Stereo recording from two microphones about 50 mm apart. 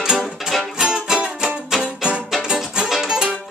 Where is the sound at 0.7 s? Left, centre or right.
Centre.